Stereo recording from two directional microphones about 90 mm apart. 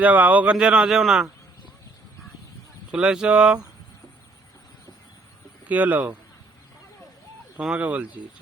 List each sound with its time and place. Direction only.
0.0 s speech: 15° right (ahead or behind)
2.9 s speech: 10° right (ahead or behind)
5.6 s speech: 15° right (ahead or behind)
7.6 s speech: 10° right (ahead or behind)